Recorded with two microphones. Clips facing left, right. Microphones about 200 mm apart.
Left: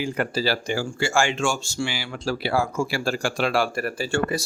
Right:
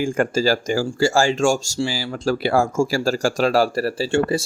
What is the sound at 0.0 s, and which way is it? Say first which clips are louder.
Speech: right 5 dB; 45° right (ahead or behind).